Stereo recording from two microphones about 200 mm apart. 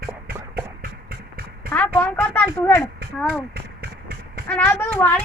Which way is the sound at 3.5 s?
50° right (ahead or behind).